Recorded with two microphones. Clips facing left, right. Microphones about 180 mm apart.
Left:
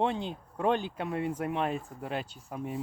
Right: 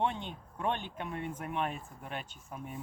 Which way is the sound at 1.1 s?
90° left.